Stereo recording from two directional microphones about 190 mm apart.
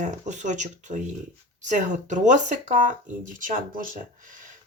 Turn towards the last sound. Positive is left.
turn(degrees=-45)  # may be behind; listen again after turning